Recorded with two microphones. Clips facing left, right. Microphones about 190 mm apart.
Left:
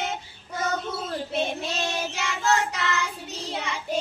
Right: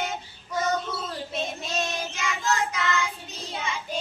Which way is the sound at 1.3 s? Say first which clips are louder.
Left 3 dB; 65° left (ahead or behind).